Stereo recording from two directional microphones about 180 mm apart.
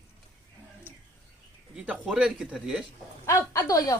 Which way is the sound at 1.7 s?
5° right (ahead or behind).